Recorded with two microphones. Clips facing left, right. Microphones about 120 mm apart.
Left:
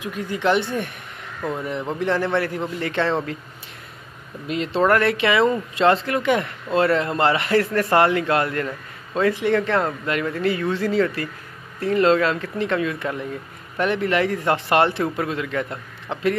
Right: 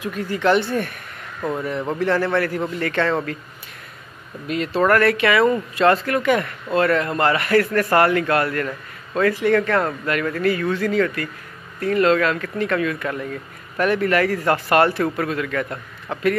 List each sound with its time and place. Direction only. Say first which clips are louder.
0.0 s speech: right 2 dB; 15° left (ahead or behind)
2.0 s speech: right 2 dB; 20° left (ahead or behind)
4.5 s speech: right 1 dB; 25° left (ahead or behind)